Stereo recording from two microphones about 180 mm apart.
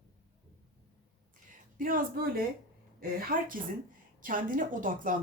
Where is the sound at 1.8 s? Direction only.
50° right (ahead or behind).